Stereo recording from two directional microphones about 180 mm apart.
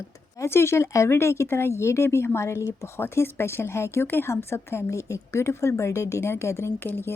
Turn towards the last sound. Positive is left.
turn(degrees=10)  # may be behind; listen again after turning